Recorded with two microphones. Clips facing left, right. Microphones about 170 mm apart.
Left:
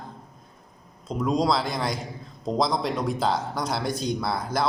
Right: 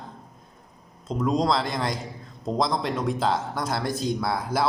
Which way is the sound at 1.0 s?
Centre (ahead or behind).